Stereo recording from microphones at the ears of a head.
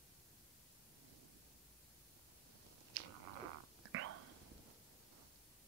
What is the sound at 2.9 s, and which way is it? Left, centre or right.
Whispering, right.